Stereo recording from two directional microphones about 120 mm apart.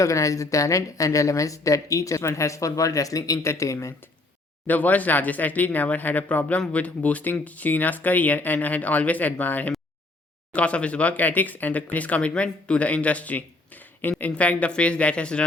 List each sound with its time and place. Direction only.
0.0 s a woman's voice: 25° left (ahead or behind)
4.6 s speech: 15° left (ahead or behind)